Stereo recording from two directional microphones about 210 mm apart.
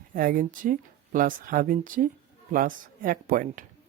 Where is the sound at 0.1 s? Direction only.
40° right (ahead or behind).